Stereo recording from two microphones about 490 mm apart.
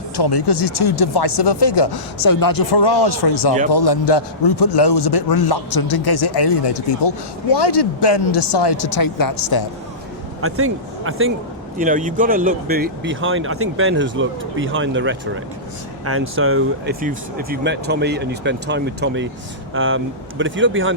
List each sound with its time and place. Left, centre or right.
0.2 s a man's voice: left
10.4 s speech: right